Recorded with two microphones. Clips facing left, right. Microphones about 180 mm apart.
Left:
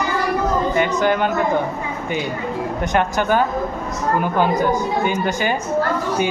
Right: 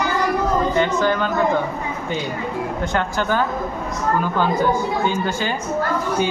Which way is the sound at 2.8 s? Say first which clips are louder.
Left 4 dB; 15° left (ahead or behind).